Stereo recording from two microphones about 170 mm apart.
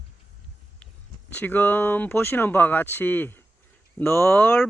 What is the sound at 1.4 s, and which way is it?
Speech, 10° left (ahead or behind).